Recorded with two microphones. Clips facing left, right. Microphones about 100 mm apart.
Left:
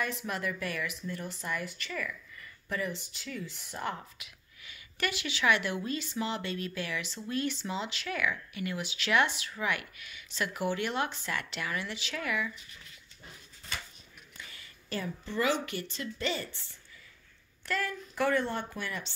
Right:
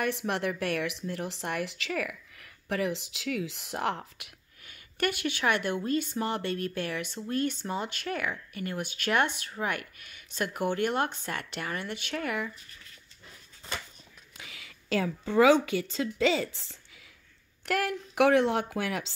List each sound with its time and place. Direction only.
0.0 s speech: 65° right (ahead or behind)
4.6 s a woman's voice: 50° right (ahead or behind)
14.3 s a sound: 90° right
16.2 s a woman's voice: 90° right
17.6 s a woman's voice: 75° right (ahead or behind)